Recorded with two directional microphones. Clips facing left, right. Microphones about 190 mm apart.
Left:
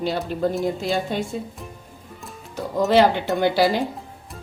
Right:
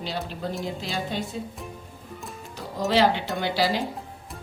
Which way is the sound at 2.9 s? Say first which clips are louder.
Left 4 dB; 55° left (ahead or behind).